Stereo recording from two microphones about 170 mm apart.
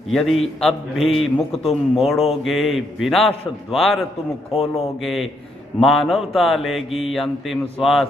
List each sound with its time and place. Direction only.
0.1 s mantra: centre (ahead or behind)